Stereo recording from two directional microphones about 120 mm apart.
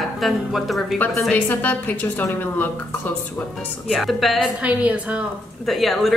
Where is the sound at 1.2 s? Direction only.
15° left (ahead or behind).